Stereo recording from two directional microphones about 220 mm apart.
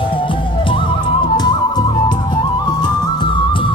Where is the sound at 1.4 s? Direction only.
20° left (ahead or behind).